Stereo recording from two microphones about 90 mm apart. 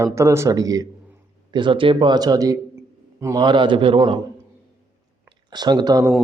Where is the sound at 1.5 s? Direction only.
65° right (ahead or behind).